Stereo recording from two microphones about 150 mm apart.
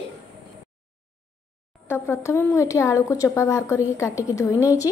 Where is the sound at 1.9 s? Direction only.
20° left (ahead or behind).